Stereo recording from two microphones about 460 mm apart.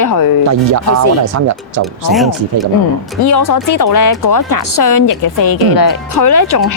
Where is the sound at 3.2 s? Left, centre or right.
Left.